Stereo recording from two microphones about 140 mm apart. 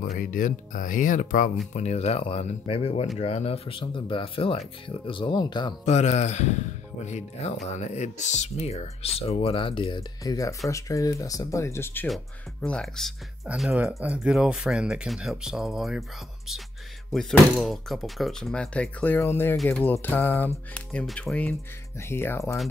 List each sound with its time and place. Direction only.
0.2 s speech: 75° left (ahead or behind)
1.7 s speech: 50° left (ahead or behind); by 5.8 s 30° left (ahead or behind)
5.9 s speech: 55° left (ahead or behind); by 19.5 s 15° left (ahead or behind)
19.5 s speech: centre (ahead or behind)
19.8 s speech: 15° left (ahead or behind)